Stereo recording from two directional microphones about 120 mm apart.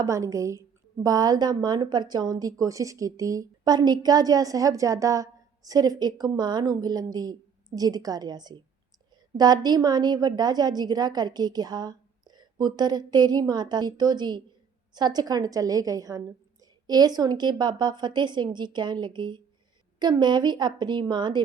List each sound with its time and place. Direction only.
0.0 s a woman's voice: 25° right (ahead or behind)